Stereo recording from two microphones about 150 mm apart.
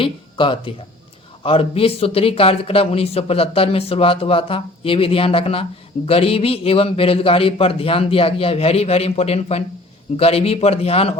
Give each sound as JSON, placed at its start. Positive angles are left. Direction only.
{"t": 0.0, "sound": "speech", "side_deg": 35}